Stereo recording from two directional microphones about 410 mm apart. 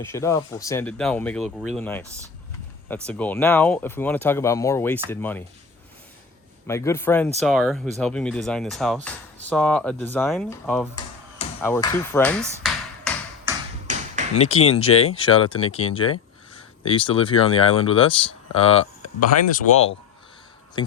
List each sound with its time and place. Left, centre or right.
0.0 s speech: centre
6.7 s speech: centre
11.3 s a sound: centre
13.9 s tap: centre
14.3 s speech: centre
14.6 s speech: left
15.0 s speech: centre
20.8 s speech: centre